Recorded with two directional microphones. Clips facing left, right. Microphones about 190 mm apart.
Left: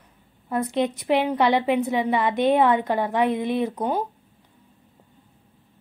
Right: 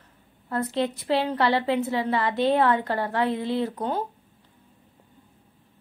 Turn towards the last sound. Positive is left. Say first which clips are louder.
# left 2 dB
turn(degrees=15)  # may be behind; listen again after turning